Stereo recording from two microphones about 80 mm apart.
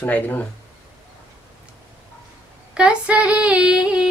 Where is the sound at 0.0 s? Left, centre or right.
Left.